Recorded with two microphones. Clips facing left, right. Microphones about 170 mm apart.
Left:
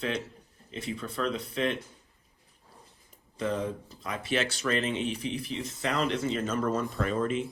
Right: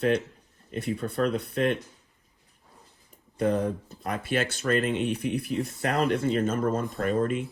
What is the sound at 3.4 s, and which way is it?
Speech, 60° right (ahead or behind).